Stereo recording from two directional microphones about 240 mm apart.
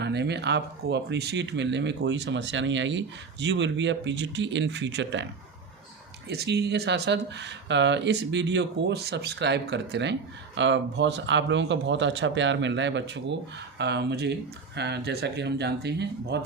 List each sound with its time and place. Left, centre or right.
0.0 s speech: right
6.2 s speech: right